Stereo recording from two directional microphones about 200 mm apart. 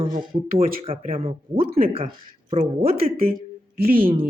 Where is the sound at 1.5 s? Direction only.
45° right (ahead or behind).